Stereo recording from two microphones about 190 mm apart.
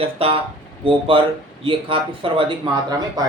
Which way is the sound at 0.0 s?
30° right (ahead or behind).